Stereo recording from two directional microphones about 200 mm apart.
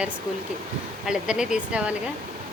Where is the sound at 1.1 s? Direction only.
5° right (ahead or behind).